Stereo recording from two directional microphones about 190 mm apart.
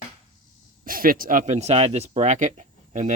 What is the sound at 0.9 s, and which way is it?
Speech, 50° right (ahead or behind).